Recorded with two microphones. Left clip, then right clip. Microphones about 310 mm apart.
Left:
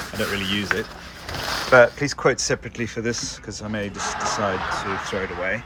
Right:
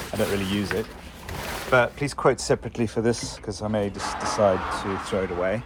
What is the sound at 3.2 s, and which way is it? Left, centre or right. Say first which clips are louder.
Speech: left 1 dB; right.